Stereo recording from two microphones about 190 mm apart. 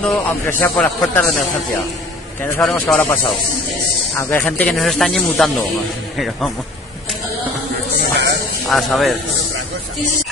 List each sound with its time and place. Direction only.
0.0 s speech: 5° left (ahead or behind)
2.6 s speech: 5° left (ahead or behind)
4.3 s speech: 5° left (ahead or behind)
7.9 s a sound: 55° right (ahead or behind)
8.6 s speech: centre (ahead or behind)